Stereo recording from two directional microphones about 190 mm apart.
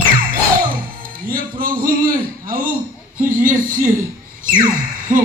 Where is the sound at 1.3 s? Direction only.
50° right (ahead or behind).